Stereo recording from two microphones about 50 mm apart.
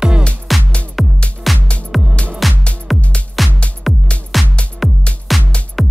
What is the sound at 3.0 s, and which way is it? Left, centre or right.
Music, left.